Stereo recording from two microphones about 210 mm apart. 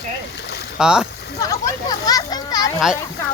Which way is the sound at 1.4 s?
15° left (ahead or behind).